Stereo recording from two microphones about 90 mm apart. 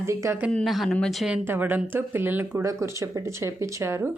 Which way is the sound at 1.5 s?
20° right (ahead or behind).